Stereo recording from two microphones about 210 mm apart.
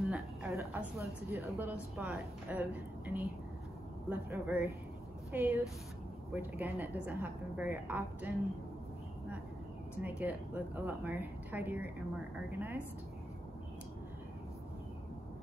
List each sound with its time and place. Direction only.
0.0 s a sound: centre (ahead or behind)
0.5 s a woman's voice: 15° right (ahead or behind)
10.0 s a woman's voice: 10° right (ahead or behind)